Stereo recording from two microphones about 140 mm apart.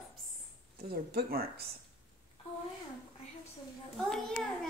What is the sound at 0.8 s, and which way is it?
Speech, 90° right.